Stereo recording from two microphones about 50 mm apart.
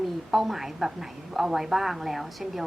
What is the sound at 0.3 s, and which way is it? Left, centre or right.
A woman's voice, centre.